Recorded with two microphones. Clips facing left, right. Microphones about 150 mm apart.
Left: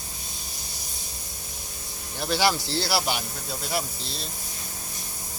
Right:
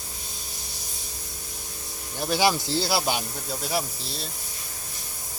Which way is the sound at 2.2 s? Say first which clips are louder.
Right 1 dB; 15° right (ahead or behind).